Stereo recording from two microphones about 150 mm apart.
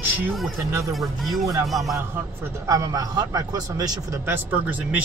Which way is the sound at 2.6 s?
25° right (ahead or behind).